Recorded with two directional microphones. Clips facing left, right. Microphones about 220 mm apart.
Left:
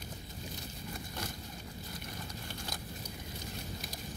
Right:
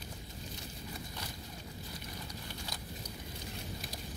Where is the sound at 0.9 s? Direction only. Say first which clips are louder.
Left 4 dB; 50° left (ahead or behind).